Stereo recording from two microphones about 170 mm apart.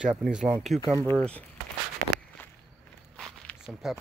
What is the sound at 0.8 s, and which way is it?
Speech, 20° right (ahead or behind).